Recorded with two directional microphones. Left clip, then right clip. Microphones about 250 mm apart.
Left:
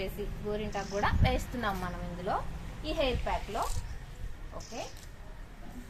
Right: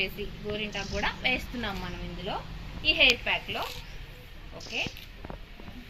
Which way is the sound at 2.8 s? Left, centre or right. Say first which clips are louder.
Right 9 dB; centre.